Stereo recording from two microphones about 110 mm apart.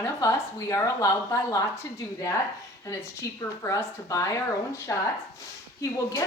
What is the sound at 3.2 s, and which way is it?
A woman's voice, 30° left (ahead or behind).